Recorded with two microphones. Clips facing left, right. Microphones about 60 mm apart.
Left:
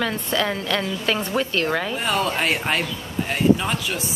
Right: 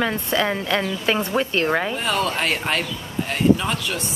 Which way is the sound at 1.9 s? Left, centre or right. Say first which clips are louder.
Even; centre.